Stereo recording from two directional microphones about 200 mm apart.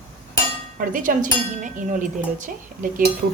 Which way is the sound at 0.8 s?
40° right (ahead or behind).